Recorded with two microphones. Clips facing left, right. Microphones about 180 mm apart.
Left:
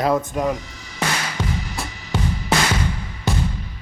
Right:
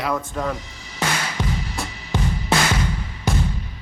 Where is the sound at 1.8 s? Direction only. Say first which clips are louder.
Right 1 dB; centre (ahead or behind).